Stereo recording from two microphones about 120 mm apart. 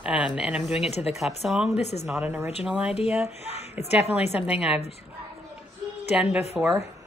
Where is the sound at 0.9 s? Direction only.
60° left (ahead or behind).